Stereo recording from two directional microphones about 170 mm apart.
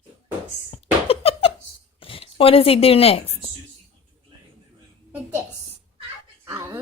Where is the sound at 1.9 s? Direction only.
30° left (ahead or behind).